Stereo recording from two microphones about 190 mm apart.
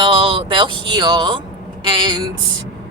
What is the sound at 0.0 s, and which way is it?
A woman's voice, 25° right (ahead or behind).